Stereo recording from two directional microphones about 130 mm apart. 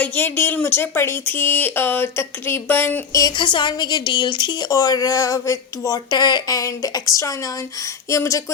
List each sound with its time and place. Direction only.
0.0 s speech: 15° left (ahead or behind)
3.3 s speech: 40° left (ahead or behind)